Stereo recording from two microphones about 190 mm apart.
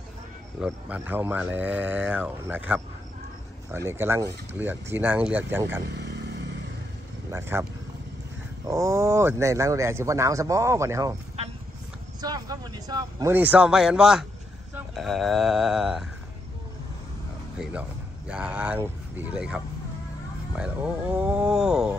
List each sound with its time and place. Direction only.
0.6 s speech: 10° right (ahead or behind)
5.9 s vehicle: 60° right (ahead or behind)
7.2 s speech: 15° right (ahead or behind)
8.6 s speech: 15° right (ahead or behind)
12.2 s speech: 20° right (ahead or behind); by 16.1 s 5° right (ahead or behind)
17.6 s speech: 5° right (ahead or behind)